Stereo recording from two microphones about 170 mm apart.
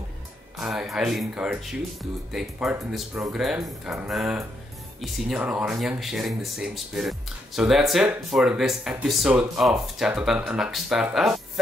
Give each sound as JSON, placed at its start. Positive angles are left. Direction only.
{"t": 0.6, "sound": "speech", "side_deg": 0}